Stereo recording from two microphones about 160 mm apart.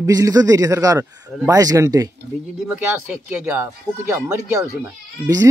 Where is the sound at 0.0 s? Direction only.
20° right (ahead or behind).